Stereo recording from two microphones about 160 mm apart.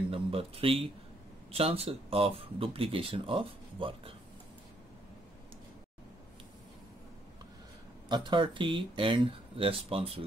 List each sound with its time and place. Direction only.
0.1 s speech: 35° right (ahead or behind)
8.1 s speech: 30° right (ahead or behind)